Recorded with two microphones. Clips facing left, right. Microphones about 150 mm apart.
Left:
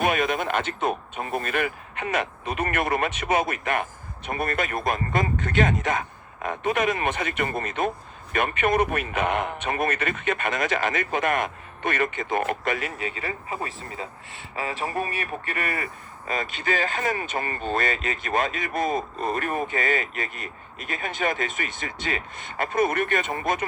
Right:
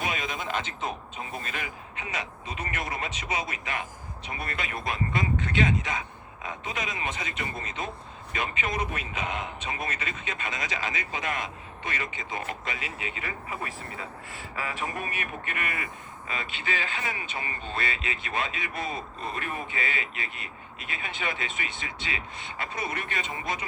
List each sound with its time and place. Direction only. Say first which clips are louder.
0.0 s speech: left 9 dB; 60° left (ahead or behind)